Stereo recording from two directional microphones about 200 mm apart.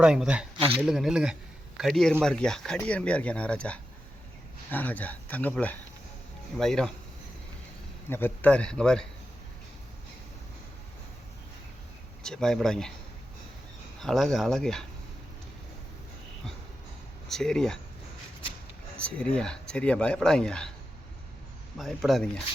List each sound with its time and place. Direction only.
0.0 s speech: 5° right (ahead or behind)
0.5 s speech: 30° right (ahead or behind)
0.8 s speech: centre (ahead or behind)
8.1 s speech: 10° left (ahead or behind)
12.2 s speech: 5° left (ahead or behind)
14.0 s speech: centre (ahead or behind)
17.2 s speech: centre (ahead or behind)
18.9 s speech: 5° left (ahead or behind)
21.8 s speech: centre (ahead or behind)